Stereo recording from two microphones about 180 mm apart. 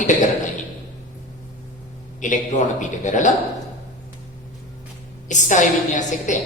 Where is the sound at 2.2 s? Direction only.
45° left (ahead or behind).